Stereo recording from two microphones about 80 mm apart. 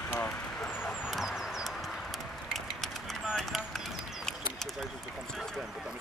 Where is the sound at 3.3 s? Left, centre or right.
Centre.